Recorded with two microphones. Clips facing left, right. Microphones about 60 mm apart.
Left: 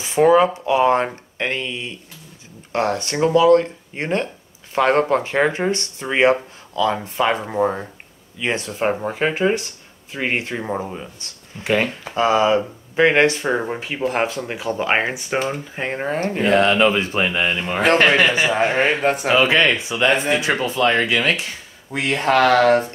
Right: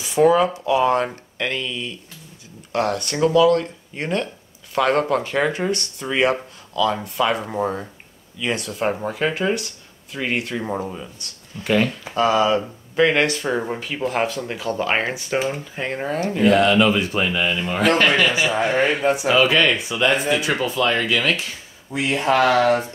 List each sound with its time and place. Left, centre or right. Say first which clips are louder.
0.0 s speech: left 2 dB; left
10.6 s speech: left 1 dB; centre
11.6 s speech: even; left
16.2 s speech: right 1 dB; left
19.3 s speech: left 2 dB; left
20.3 s speech: left 1 dB; left
21.9 s speech: left 1 dB; left